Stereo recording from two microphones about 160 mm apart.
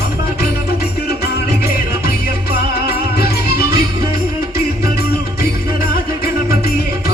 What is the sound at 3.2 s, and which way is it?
Music, 75° left (ahead or behind).